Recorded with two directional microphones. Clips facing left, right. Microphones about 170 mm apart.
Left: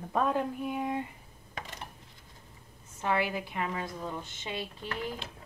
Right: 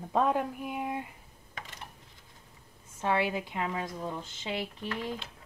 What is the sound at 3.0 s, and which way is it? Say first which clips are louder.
Speech: right 1 dB; 20° right (ahead or behind).